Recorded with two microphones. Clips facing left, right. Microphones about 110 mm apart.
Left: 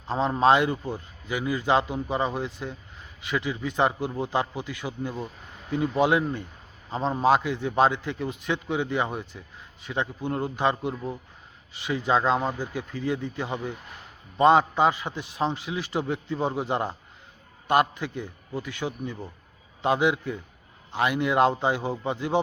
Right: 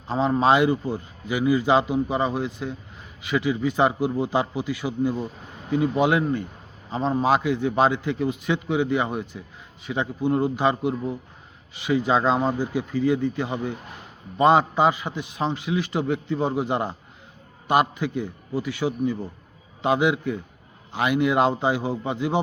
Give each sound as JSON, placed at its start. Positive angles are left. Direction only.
{"t": 0.1, "sound": "a man's voice", "side_deg": -5}
{"t": 12.1, "sound": "a man's voice", "side_deg": -15}
{"t": 12.9, "sound": "a man's voice", "side_deg": 0}